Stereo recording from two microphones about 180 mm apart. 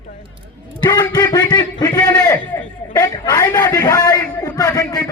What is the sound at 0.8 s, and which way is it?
A man's voice, 20° left (ahead or behind).